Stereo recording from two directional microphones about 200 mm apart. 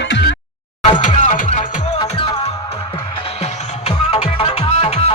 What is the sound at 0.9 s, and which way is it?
Music, 35° left (ahead or behind).